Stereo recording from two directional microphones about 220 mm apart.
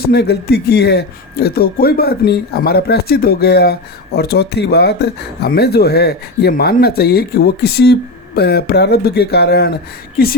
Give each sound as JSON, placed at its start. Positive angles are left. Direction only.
{"t": 0.0, "sound": "speech", "side_deg": 45}